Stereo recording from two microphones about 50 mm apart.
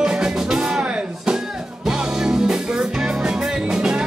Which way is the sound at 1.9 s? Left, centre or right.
Centre.